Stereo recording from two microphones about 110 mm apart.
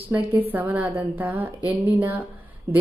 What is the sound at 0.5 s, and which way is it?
A woman's voice, 15° right (ahead or behind).